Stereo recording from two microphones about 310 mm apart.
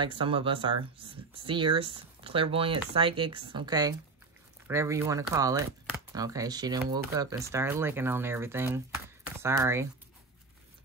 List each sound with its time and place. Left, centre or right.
0.0 s speech: centre